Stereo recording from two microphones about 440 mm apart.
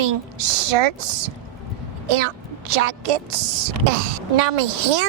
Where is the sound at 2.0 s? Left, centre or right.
Right.